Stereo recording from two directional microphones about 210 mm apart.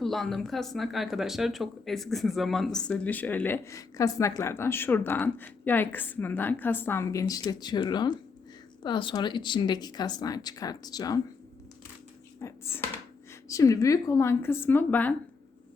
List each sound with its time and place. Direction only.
0.0 s speech: centre (ahead or behind); by 11.2 s 20° left (ahead or behind)
12.4 s speech: 15° left (ahead or behind)